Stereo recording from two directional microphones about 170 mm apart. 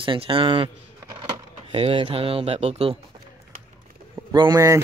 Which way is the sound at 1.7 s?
35° right (ahead or behind).